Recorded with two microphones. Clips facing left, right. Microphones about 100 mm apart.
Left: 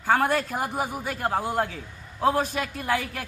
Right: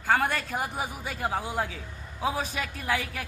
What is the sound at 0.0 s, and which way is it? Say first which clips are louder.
Speech: left 3 dB; 5° left (ahead or behind).